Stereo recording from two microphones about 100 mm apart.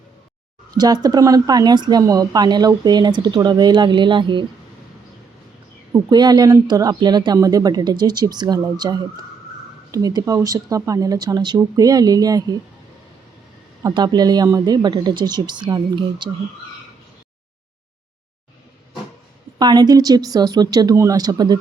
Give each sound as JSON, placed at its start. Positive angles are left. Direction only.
{"t": 0.7, "sound": "speech", "side_deg": -40}
{"t": 5.9, "sound": "speech", "side_deg": -45}
{"t": 13.9, "sound": "speech", "side_deg": -45}
{"t": 19.5, "sound": "speech", "side_deg": -45}